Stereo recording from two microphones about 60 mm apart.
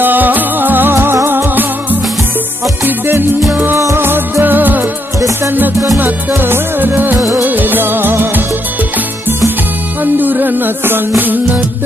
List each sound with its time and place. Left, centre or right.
0.0 s music: right
5.9 s music: right
7.2 s music of bollywood: right
10.1 s music: right